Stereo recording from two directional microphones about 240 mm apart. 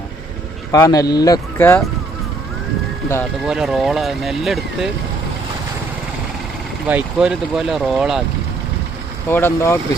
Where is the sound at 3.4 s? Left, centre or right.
Centre.